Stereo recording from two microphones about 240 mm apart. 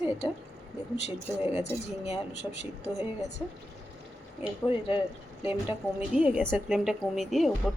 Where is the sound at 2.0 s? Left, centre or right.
Left.